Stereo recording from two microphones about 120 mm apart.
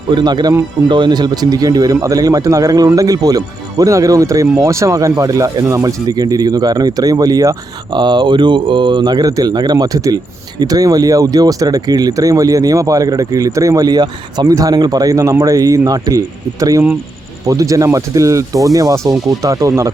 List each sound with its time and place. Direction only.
0.1 s speech: 40° right (ahead or behind)